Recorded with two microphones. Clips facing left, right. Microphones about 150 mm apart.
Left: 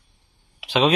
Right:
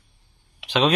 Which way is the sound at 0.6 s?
Centre (ahead or behind).